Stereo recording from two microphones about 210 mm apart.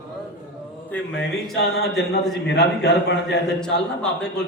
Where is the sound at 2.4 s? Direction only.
55° left (ahead or behind).